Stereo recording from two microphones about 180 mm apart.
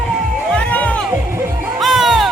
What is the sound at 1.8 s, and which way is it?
Music, centre (ahead or behind).